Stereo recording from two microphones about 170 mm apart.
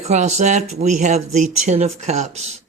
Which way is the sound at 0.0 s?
40° right (ahead or behind).